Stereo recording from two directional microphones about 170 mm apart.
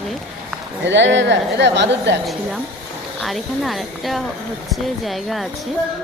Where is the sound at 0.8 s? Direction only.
90° right.